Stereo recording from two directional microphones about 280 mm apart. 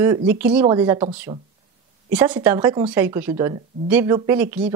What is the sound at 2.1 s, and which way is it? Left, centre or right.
A woman's voice, centre.